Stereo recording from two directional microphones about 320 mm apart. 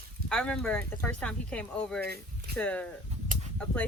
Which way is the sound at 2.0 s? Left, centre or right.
Right.